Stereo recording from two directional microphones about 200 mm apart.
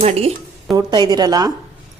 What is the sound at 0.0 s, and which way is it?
Speech, 30° right (ahead or behind).